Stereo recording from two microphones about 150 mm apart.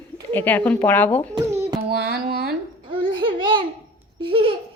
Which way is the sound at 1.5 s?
20° right (ahead or behind).